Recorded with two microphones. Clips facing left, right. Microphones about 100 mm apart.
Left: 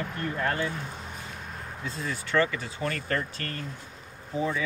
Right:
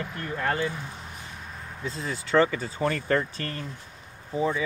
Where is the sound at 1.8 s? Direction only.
25° right (ahead or behind).